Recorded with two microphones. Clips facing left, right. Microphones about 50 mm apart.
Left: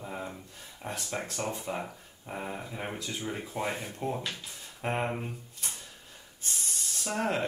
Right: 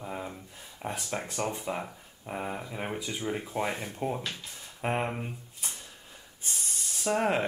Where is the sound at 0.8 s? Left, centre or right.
Centre.